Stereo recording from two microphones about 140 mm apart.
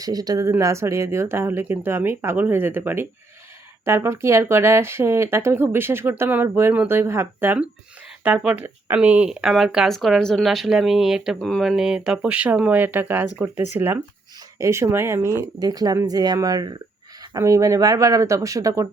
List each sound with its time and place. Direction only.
0.0 s speech: 25° right (ahead or behind)